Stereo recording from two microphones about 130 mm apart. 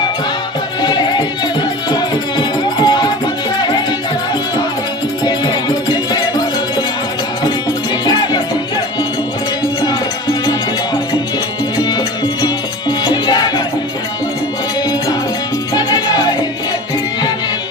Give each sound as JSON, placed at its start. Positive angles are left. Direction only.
{"t": 0.8, "sound": "music", "side_deg": 35}
{"t": 5.2, "sound": "music", "side_deg": 35}
{"t": 8.0, "sound": "music", "side_deg": 30}
{"t": 9.8, "sound": "music", "side_deg": 30}
{"t": 11.8, "sound": "music", "side_deg": 30}
{"t": 15.7, "sound": "music", "side_deg": 30}